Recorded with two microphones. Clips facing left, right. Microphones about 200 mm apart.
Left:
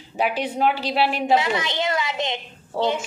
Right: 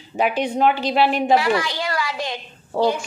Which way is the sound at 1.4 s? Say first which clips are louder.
Right 3 dB; 20° left (ahead or behind).